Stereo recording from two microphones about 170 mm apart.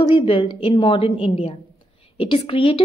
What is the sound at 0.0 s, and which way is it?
A woman's voice, 30° left (ahead or behind).